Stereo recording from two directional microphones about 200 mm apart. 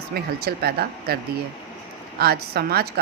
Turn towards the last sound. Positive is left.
turn(degrees=-50)  # may be behind; listen again after turning